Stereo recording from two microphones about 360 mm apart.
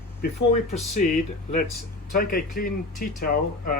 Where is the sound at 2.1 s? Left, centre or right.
Left.